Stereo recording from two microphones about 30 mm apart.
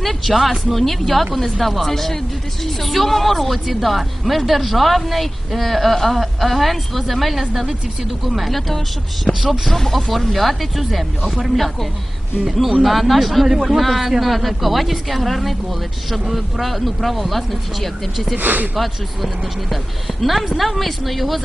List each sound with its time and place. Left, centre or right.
0.0 s speech: centre
9.3 s speech: centre
9.7 s speech: centre
11.2 s speech: centre
11.5 s speech: centre
18.4 s speech: right
18.8 s speech: centre